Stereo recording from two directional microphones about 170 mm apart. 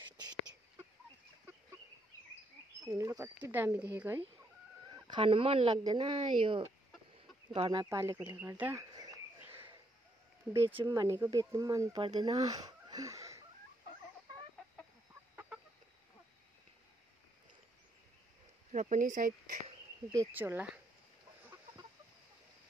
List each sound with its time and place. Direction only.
2.9 s speech: 20° right (ahead or behind)
4.9 s speech: 30° right (ahead or behind)
7.8 s speech: 20° right (ahead or behind)
8.9 s insect: 20° right (ahead or behind)
10.5 s speech: 15° right (ahead or behind)
18.7 s speech: 50° right (ahead or behind)
20.3 s speech: 10° right (ahead or behind)